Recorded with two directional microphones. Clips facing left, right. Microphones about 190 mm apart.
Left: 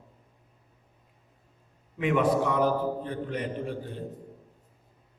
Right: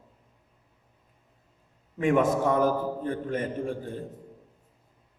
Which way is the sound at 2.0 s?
45° right (ahead or behind).